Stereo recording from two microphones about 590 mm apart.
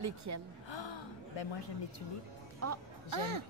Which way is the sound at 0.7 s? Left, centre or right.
Left.